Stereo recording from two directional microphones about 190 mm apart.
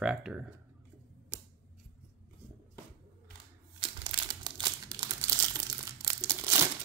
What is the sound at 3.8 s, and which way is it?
Crumpling, 25° right (ahead or behind).